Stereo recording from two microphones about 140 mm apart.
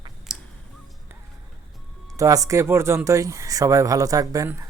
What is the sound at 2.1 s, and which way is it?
Speech, 25° right (ahead or behind).